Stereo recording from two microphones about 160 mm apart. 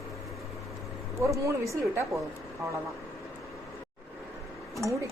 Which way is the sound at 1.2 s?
20° right (ahead or behind).